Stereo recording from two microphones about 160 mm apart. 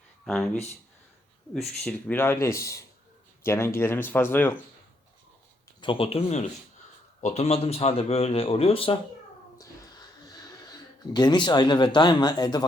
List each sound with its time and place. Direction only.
0.3 s speech: 5° left (ahead or behind)
1.5 s speech: 5° left (ahead or behind)
5.8 s speech: 35° left (ahead or behind)
9.6 s a sound: 25° left (ahead or behind)